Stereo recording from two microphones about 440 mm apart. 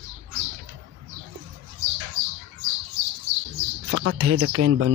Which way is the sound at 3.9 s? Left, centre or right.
Right.